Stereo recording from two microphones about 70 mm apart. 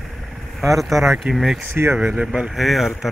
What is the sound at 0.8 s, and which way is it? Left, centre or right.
Speech, centre.